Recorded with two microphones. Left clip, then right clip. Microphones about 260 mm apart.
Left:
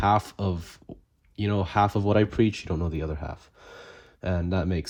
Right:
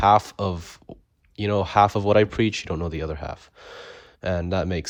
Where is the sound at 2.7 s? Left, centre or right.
Left.